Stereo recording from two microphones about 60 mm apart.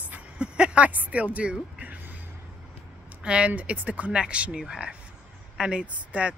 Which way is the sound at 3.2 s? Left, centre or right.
Centre.